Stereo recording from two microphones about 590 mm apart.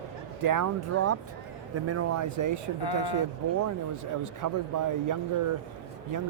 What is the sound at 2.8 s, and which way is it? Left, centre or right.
Speech, left.